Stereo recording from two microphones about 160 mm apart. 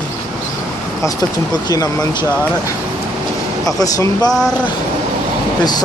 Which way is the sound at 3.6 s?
20° left (ahead or behind).